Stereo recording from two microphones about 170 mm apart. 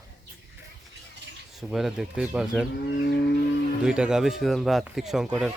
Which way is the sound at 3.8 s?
5° right (ahead or behind).